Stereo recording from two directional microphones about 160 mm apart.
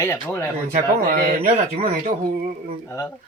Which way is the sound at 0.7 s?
60° right (ahead or behind).